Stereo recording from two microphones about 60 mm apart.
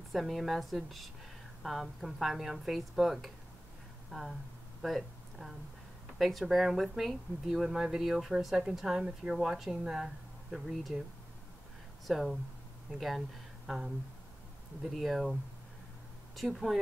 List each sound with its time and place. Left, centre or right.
0.1 s speech: centre
12.1 s speech: centre
13.7 s speech: centre
16.3 s speech: centre